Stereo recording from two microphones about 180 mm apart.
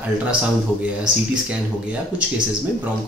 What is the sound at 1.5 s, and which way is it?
Speech, 5° right (ahead or behind).